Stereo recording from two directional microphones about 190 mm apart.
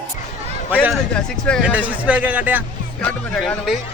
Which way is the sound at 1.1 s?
5° left (ahead or behind).